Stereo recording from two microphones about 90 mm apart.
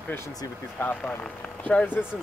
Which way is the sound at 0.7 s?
15° left (ahead or behind).